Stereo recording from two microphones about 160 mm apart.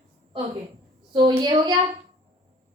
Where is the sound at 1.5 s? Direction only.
25° right (ahead or behind).